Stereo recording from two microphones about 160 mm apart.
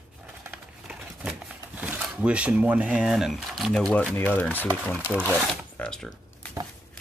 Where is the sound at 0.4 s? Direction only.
10° right (ahead or behind); by 4.6 s 10° left (ahead or behind).